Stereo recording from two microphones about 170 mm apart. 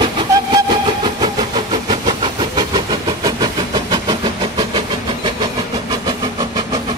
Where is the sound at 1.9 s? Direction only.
25° right (ahead or behind).